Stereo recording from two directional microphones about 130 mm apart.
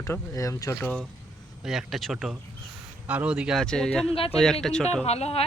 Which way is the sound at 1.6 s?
5° right (ahead or behind).